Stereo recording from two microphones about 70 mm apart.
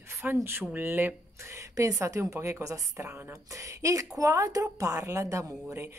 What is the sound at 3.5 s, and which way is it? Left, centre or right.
A woman's voice, right.